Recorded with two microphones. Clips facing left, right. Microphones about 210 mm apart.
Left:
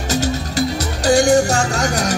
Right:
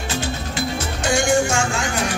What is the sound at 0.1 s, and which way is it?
Music, 40° left (ahead or behind).